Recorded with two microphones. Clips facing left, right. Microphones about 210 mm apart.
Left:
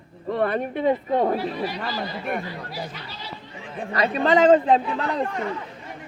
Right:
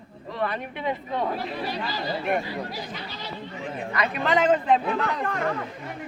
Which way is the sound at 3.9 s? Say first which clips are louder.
Left 5 dB; 30° left (ahead or behind).